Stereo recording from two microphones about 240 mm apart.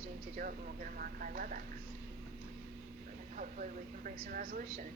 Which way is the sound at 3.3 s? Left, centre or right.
Right.